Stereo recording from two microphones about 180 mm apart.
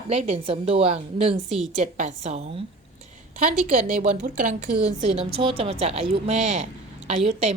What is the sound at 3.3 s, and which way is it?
A woman's voice, 50° right (ahead or behind).